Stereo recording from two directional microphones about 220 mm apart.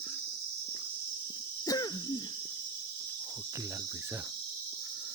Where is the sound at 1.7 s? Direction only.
15° left (ahead or behind).